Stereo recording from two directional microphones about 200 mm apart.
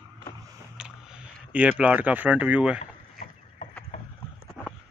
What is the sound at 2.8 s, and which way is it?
Rowboat, 40° left (ahead or behind).